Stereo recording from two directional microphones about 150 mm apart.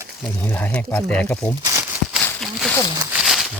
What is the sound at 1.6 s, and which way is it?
Crumpling, 20° right (ahead or behind).